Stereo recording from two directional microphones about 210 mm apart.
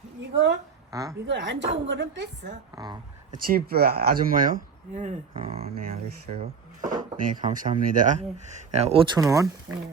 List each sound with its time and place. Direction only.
0.2 s speech: 55° right (ahead or behind)
0.9 s a woman's voice: 15° right (ahead or behind)
1.3 s speech: 60° right (ahead or behind)
2.7 s speech: 20° right (ahead or behind)
3.4 s speech: 45° right (ahead or behind); by 5.7 s 30° right (ahead or behind)
6.8 s speech: 40° right (ahead or behind)
9.1 s speech: 15° right (ahead or behind)